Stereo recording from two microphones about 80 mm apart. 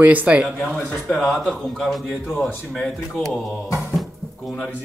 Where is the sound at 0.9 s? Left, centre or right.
Centre.